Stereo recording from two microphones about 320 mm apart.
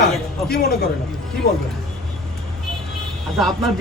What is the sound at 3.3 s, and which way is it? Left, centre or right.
Speech, centre.